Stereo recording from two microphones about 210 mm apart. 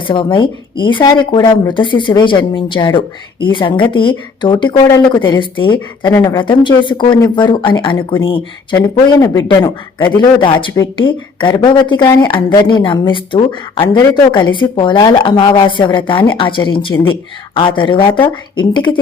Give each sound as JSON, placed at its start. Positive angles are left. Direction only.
{"t": 0.1, "sound": "speech", "side_deg": 25}